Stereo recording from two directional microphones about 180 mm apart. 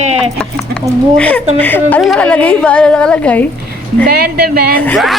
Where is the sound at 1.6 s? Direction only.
10° left (ahead or behind).